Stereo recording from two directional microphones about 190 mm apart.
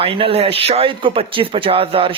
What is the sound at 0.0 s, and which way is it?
Speech, 30° right (ahead or behind).